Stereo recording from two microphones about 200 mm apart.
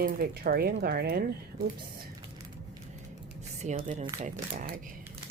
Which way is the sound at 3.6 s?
35° right (ahead or behind).